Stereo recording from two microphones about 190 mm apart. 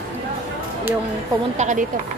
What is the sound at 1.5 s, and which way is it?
Speech, 40° right (ahead or behind).